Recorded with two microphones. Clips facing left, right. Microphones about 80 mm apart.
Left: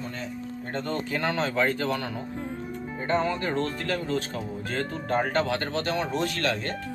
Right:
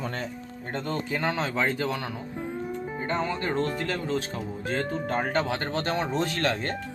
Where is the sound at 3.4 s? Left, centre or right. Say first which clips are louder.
Right 1 dB; centre.